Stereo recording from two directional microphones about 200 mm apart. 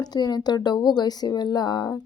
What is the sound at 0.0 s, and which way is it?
Speech, 20° left (ahead or behind).